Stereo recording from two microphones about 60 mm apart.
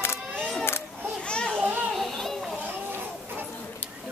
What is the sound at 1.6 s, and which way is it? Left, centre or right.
Children playing, right.